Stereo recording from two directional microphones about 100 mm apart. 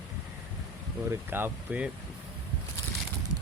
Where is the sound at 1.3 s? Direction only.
20° right (ahead or behind).